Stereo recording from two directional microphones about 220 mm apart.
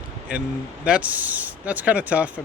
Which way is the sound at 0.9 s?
5° right (ahead or behind).